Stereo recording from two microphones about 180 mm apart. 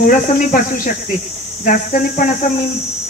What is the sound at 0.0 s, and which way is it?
Speech, 45° left (ahead or behind).